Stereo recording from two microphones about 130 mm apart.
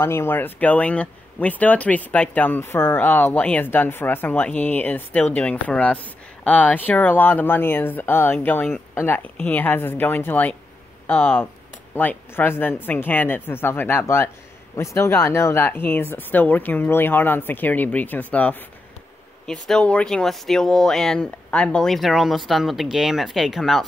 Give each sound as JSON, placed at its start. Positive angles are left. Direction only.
{"t": 0.0, "sound": "speech", "side_deg": 20}